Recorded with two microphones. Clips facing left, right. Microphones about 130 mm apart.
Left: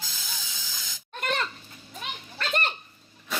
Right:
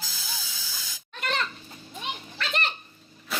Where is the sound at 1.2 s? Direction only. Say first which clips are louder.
Left 1 dB; 45° left (ahead or behind).